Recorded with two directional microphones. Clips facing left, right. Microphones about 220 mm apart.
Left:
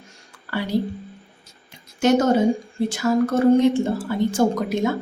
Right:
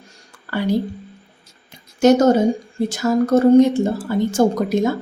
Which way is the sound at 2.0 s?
40° right (ahead or behind).